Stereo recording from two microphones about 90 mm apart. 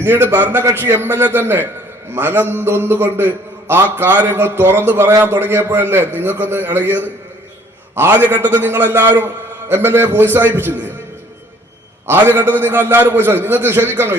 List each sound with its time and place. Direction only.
0.0 s a man's voice: 25° right (ahead or behind)
12.0 s a man's voice: 25° right (ahead or behind)